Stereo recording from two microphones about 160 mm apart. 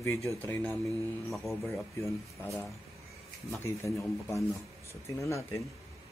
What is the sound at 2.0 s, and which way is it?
Speech, 20° left (ahead or behind).